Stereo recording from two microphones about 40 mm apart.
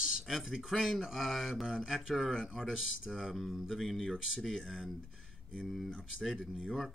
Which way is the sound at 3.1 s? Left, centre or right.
Centre.